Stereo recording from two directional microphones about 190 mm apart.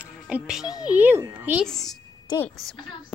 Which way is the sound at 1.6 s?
Centre (ahead or behind).